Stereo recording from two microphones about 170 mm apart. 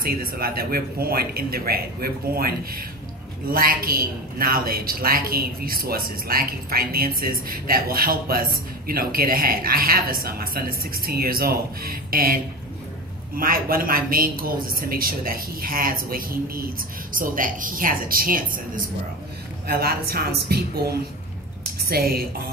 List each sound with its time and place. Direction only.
0.0 s a woman's voice: 60° right (ahead or behind)
13.4 s a woman's voice: 60° right (ahead or behind)
19.7 s a woman's voice: 65° right (ahead or behind)